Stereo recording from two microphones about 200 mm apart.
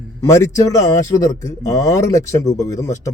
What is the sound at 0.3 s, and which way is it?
Speech, 15° left (ahead or behind).